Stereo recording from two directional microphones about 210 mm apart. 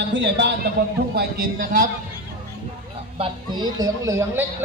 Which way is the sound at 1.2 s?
45° right (ahead or behind).